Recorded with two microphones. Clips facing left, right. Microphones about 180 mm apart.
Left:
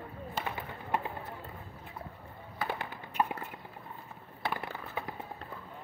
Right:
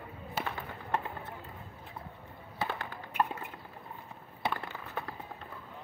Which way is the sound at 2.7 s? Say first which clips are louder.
Left 1 dB; 15° left (ahead or behind).